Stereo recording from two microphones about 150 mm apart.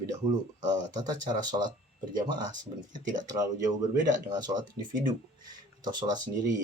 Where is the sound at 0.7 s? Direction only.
25° right (ahead or behind).